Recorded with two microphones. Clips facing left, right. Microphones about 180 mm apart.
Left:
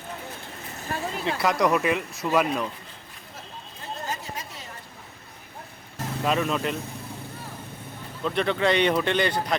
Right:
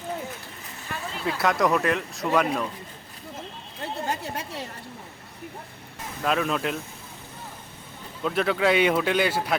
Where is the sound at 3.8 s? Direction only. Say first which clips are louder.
Right 4 dB; 65° right (ahead or behind).